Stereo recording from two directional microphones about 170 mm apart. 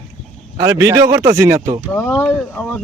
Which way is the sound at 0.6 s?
20° right (ahead or behind).